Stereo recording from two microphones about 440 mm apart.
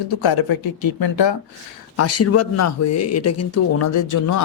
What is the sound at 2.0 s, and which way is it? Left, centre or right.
Speech, left.